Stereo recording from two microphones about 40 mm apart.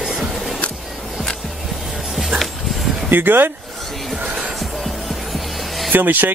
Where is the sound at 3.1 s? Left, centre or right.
Right.